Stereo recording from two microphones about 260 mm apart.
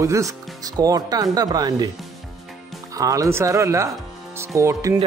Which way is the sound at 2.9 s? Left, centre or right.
Centre.